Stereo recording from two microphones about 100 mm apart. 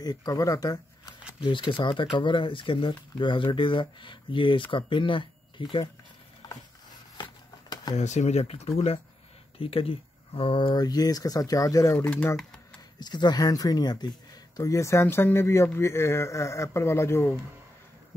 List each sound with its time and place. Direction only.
0.0 s speech: 40° left (ahead or behind)
1.4 s speech: 55° left (ahead or behind)
6.4 s mechanisms: 45° left (ahead or behind)
7.9 s speech: 40° left (ahead or behind)
8.3 s speech: 90° left
9.6 s speech: 65° left (ahead or behind)
10.8 s speech: 40° left (ahead or behind)
12.0 s speech: 15° left (ahead or behind)
13.0 s speech: 45° left (ahead or behind)
14.6 s speech: 30° left (ahead or behind)